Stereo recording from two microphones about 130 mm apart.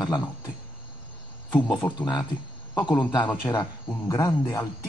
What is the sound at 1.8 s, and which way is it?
Speech, 30° left (ahead or behind).